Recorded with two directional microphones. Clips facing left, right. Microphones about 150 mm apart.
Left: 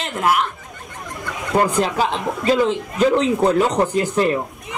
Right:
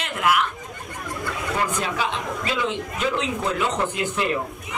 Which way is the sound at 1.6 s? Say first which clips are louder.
Left 9 dB; 40° left (ahead or behind).